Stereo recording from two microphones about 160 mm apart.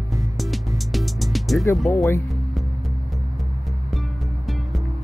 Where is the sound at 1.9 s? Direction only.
20° left (ahead or behind).